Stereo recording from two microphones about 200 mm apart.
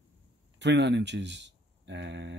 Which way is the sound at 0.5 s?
60° right (ahead or behind).